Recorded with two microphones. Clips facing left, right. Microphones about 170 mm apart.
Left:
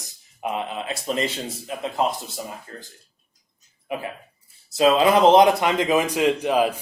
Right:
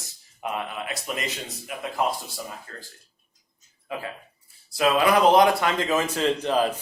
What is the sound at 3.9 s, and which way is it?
Speech, 20° left (ahead or behind).